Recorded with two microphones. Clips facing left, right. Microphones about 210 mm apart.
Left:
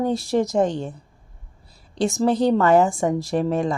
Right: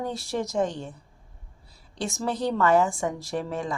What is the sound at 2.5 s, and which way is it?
Speech, 30° left (ahead or behind).